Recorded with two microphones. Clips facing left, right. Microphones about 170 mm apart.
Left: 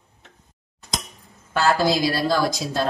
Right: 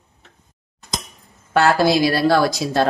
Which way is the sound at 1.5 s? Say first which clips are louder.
Right 4 dB; 65° right (ahead or behind).